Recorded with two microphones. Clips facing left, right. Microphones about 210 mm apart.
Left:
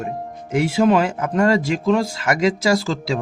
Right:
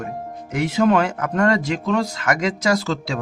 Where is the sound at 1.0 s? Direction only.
25° left (ahead or behind).